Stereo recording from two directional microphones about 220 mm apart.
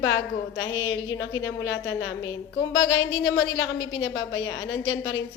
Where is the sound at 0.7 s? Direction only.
60° left (ahead or behind).